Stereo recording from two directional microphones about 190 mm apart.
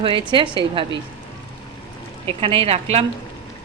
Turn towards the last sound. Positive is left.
turn(degrees=-30)  # may be behind; listen again after turning